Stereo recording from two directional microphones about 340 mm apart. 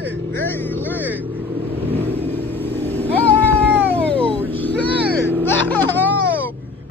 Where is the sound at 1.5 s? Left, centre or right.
Centre.